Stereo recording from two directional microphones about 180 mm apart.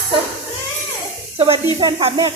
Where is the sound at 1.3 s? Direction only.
30° right (ahead or behind).